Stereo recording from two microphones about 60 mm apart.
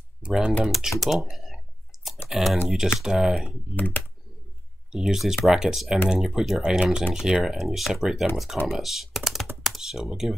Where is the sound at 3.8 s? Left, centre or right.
Left.